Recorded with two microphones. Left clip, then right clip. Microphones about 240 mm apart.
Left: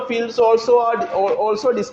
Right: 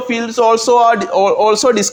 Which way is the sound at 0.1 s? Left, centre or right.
Right.